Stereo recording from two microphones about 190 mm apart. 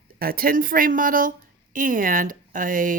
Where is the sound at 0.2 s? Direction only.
50° right (ahead or behind).